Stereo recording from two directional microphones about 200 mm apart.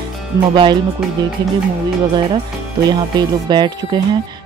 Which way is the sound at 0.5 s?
20° right (ahead or behind).